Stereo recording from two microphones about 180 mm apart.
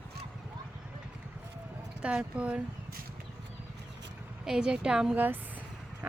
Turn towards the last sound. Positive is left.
turn(degrees=-10)  # may be behind; listen again after turning